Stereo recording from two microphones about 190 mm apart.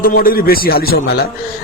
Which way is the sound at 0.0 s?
50° left (ahead or behind).